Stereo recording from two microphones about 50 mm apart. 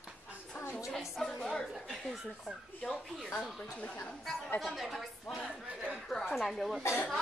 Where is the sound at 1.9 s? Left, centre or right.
Centre.